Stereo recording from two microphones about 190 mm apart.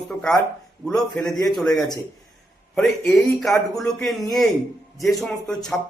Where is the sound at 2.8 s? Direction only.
Centre (ahead or behind).